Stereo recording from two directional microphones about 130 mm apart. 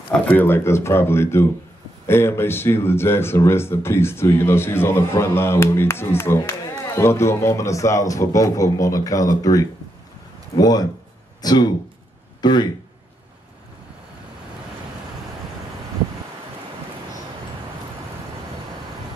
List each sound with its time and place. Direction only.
0.1 s speech: 15° left (ahead or behind); by 12.6 s 35° left (ahead or behind)